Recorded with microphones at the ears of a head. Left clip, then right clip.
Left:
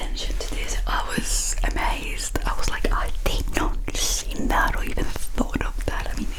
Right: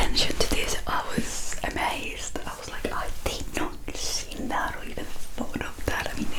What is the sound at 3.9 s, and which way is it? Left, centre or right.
Whispering, left.